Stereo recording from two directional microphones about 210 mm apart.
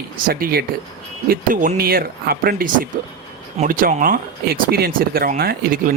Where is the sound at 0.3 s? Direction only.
45° right (ahead or behind).